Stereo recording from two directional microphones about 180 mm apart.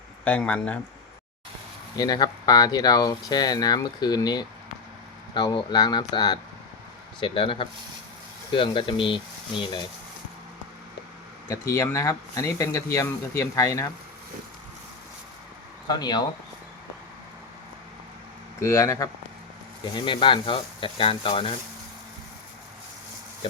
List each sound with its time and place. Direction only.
0.3 s speech: 10° left (ahead or behind)
2.0 s speech: 20° left (ahead or behind)
11.4 s speech: 15° left (ahead or behind)
15.9 s speech: 25° left (ahead or behind)
18.6 s speech: 15° left (ahead or behind)